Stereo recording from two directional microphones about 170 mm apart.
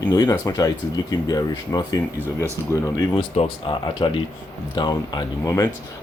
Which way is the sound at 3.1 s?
35° left (ahead or behind).